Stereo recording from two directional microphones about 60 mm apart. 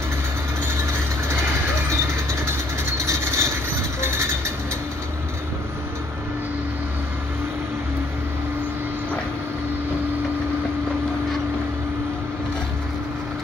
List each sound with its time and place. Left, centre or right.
3.1 s vehicle: right